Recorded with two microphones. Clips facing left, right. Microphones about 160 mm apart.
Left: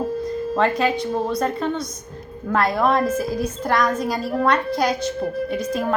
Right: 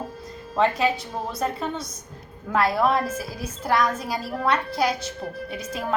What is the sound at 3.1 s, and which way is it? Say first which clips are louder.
Speech: left 9 dB; 55° left (ahead or behind).